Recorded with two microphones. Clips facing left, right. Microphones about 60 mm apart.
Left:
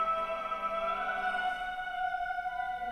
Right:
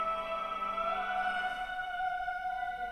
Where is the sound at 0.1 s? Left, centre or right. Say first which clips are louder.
Left 2 dB; left.